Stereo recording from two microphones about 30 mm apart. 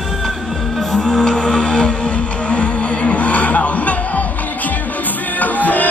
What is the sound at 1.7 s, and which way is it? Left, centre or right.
Music, left.